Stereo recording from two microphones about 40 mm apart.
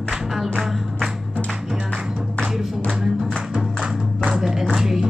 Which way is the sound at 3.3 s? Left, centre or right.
Right.